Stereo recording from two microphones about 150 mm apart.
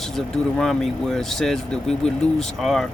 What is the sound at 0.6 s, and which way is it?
Speech, 5° left (ahead or behind).